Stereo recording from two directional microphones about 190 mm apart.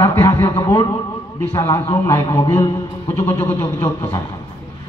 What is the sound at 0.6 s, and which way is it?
A man's voice, 20° left (ahead or behind).